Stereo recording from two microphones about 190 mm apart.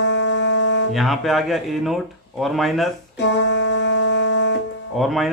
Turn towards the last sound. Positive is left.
turn(degrees=0)  # may be behind; listen again after turning